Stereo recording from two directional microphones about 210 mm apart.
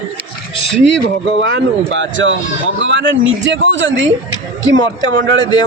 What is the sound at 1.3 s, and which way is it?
Speech, 65° right (ahead or behind).